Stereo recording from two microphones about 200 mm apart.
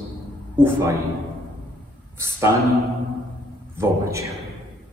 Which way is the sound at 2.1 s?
15° right (ahead or behind).